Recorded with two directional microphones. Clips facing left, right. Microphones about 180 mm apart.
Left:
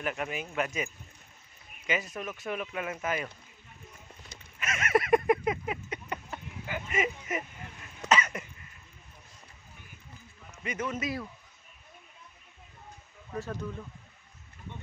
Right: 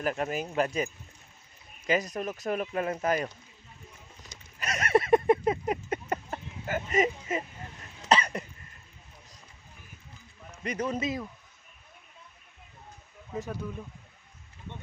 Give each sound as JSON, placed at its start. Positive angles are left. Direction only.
{"t": 0.0, "sound": "speech", "side_deg": -35}
{"t": 1.9, "sound": "speech", "side_deg": -40}
{"t": 4.6, "sound": "a sound", "side_deg": -35}
{"t": 8.1, "sound": "cough", "side_deg": -35}
{"t": 10.5, "sound": "a man's voice", "side_deg": -35}
{"t": 13.3, "sound": "speech", "side_deg": -15}